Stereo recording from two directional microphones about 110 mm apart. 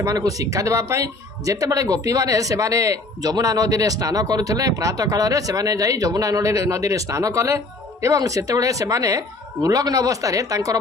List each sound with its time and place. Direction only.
0.0 s speech: 30° right (ahead or behind)